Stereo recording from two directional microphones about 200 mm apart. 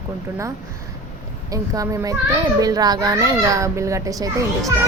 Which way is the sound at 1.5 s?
15° right (ahead or behind).